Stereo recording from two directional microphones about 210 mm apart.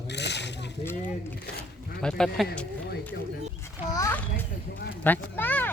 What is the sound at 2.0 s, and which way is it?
Speech, 5° left (ahead or behind).